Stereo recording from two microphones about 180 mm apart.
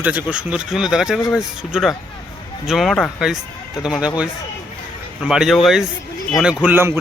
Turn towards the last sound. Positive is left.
turn(degrees=-15)  # may be behind; listen again after turning